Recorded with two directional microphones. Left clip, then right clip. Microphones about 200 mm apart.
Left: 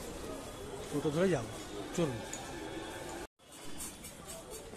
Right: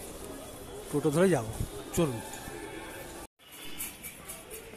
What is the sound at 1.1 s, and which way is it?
Speech, 20° right (ahead or behind).